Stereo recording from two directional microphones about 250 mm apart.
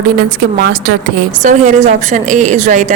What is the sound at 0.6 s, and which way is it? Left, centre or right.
A woman's voice, right.